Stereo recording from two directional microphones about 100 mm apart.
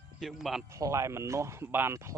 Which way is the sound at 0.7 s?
30° right (ahead or behind).